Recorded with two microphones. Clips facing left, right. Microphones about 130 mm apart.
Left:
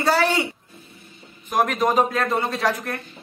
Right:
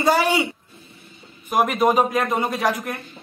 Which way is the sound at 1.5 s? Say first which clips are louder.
Right 2 dB; 10° right (ahead or behind).